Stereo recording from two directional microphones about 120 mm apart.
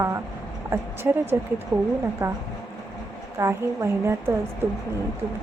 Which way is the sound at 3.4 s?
25° right (ahead or behind).